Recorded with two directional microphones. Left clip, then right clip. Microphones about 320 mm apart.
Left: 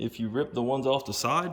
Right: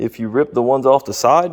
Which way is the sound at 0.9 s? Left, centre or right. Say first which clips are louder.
Right 14 dB; centre.